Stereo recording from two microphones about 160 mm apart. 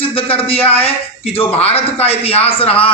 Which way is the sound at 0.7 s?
40° left (ahead or behind).